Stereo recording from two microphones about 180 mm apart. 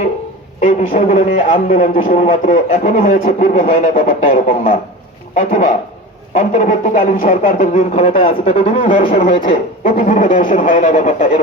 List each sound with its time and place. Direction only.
0.6 s speech: 40° left (ahead or behind)
1.6 s speech: 50° left (ahead or behind)